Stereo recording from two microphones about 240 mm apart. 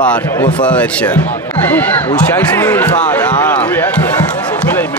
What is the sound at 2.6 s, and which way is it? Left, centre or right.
Basketball bounce, centre.